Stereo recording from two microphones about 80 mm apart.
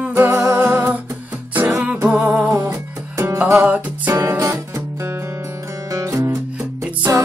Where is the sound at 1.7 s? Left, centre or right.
Centre.